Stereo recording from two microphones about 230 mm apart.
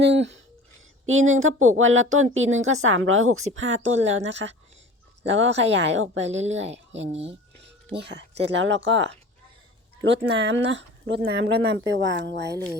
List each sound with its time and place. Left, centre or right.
0.0 s a sound: right
1.0 s speech: right
7.1 s speech: right
7.9 s speech: right